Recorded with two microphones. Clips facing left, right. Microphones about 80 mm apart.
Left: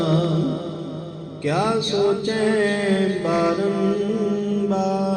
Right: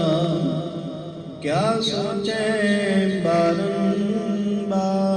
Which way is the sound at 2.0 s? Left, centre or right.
Left.